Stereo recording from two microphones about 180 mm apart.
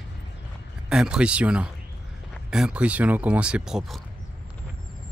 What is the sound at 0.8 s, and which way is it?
Speech, 5° right (ahead or behind).